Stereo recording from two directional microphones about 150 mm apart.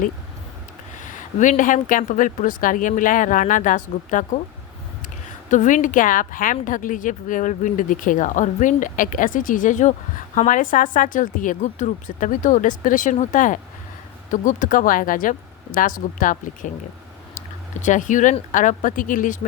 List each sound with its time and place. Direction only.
0.9 s a woman's voice: 55° left (ahead or behind)
17.7 s a woman's voice: 55° left (ahead or behind)